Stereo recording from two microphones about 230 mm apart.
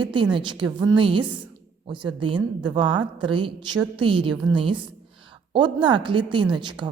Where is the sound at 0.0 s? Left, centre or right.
Right.